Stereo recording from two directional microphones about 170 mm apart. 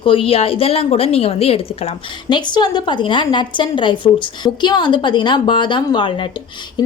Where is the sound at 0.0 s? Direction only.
30° left (ahead or behind).